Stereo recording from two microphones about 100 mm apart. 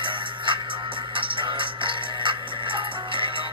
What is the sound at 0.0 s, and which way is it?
Music, 55° right (ahead or behind).